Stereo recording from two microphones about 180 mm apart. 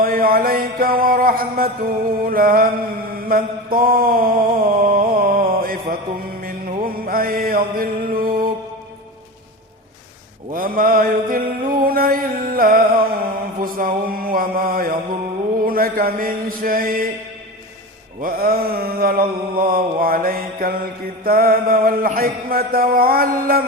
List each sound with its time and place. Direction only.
0.0 s music: 55° right (ahead or behind)
3.2 s mantra: 55° right (ahead or behind)
10.5 s mantra: 50° right (ahead or behind)
13.6 s music: 50° right (ahead or behind)
18.2 s mantra: 55° right (ahead or behind)